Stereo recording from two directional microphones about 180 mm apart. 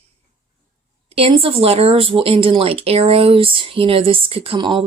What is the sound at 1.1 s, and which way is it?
A woman's voice, 30° right (ahead or behind).